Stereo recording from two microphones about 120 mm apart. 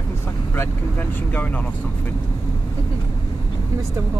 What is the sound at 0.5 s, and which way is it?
Speech, 15° left (ahead or behind).